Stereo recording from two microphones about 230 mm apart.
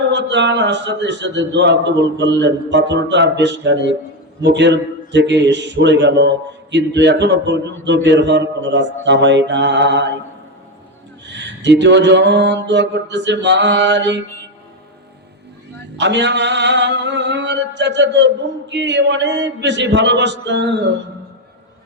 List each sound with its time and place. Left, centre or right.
0.1 s a man's voice: right
11.3 s a man's voice: right
16.0 s a man's voice: right